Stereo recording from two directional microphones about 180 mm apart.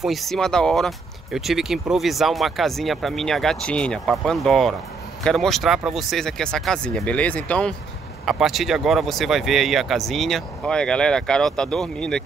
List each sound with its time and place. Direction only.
0.0 s speech: centre (ahead or behind)